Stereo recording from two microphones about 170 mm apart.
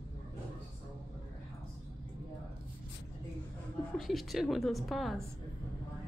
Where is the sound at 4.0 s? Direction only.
Centre (ahead or behind).